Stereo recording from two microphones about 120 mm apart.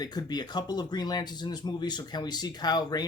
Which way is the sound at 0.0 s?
35° left (ahead or behind).